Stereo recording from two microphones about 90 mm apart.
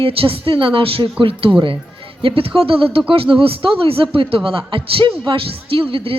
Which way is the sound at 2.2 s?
90° right.